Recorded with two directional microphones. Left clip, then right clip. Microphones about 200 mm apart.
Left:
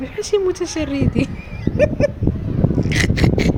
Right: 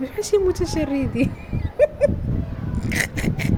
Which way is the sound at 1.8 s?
5° right (ahead or behind).